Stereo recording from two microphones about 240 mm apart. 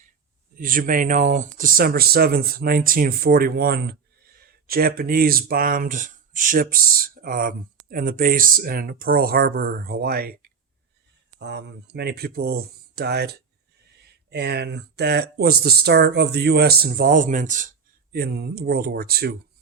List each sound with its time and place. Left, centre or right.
0.5 s speech: right